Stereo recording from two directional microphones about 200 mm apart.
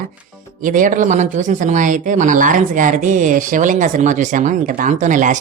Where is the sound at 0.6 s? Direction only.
40° right (ahead or behind).